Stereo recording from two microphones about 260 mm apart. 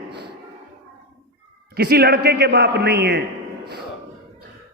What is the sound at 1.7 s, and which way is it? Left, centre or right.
A man's voice, right.